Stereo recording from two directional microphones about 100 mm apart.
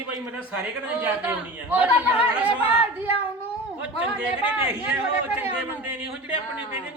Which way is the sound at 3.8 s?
10° right (ahead or behind).